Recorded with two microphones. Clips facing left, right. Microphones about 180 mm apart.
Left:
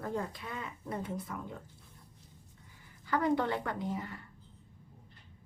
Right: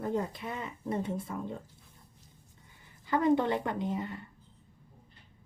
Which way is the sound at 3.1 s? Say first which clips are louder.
Right 4 dB; 20° right (ahead or behind).